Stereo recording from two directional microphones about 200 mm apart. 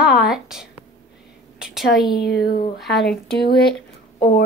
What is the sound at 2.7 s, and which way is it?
Speech, centre (ahead or behind).